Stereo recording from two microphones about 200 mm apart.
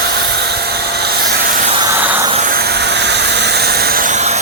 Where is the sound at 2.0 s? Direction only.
10° right (ahead or behind).